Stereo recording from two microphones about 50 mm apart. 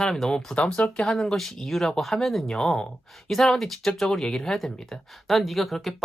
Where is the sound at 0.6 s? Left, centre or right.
Left.